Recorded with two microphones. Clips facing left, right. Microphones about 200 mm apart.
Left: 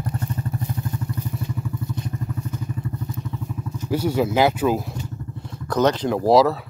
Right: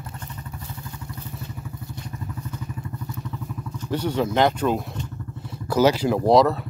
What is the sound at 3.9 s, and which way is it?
Speech, 10° left (ahead or behind).